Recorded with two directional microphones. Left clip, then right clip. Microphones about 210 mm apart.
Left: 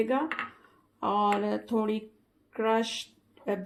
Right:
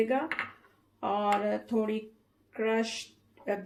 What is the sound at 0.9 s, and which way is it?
Speech, 45° left (ahead or behind).